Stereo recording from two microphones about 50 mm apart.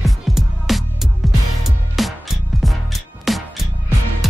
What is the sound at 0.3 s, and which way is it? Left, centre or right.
Music, centre.